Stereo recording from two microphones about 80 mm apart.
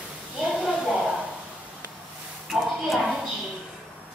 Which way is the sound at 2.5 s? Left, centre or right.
Centre.